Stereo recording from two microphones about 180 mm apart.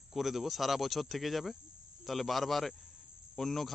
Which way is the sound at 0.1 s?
Centre (ahead or behind).